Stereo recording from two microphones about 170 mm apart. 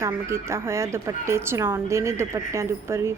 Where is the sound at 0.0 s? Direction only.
15° right (ahead or behind).